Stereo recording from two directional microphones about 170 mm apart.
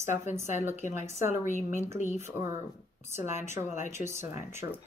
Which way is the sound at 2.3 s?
15° right (ahead or behind).